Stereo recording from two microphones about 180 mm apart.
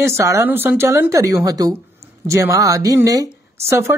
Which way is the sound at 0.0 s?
15° right (ahead or behind).